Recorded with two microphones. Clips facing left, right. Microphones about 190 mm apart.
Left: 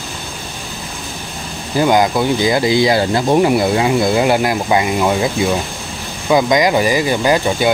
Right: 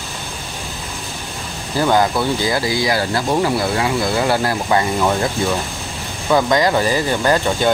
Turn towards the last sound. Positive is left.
turn(degrees=10)  # may be behind; listen again after turning